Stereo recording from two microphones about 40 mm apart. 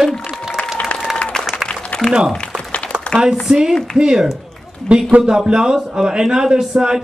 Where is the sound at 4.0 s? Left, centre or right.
Centre.